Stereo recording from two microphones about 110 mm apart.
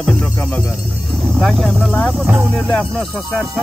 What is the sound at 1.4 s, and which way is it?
Speech, centre (ahead or behind).